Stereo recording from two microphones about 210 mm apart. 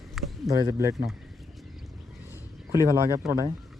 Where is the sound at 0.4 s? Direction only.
15° right (ahead or behind).